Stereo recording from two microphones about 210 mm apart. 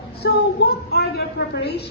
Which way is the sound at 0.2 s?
50° left (ahead or behind).